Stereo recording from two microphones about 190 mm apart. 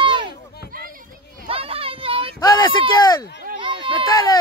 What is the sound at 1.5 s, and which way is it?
Children playing, 30° right (ahead or behind).